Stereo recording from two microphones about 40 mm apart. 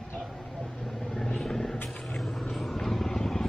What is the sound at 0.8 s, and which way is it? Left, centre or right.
Vehicle, centre.